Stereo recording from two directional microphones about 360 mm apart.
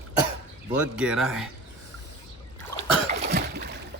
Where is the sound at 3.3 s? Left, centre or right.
Right.